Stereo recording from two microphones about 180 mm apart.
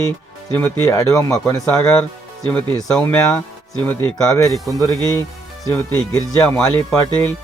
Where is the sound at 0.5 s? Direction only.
15° left (ahead or behind).